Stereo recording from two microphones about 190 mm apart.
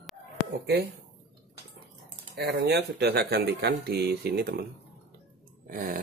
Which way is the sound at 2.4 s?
60° right (ahead or behind).